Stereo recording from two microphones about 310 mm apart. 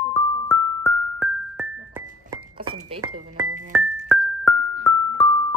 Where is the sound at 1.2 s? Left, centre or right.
Centre.